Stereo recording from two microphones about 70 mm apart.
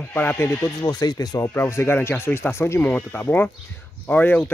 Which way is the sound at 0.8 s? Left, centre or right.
Left.